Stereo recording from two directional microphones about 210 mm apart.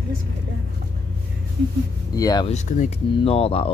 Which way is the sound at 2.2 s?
15° left (ahead or behind).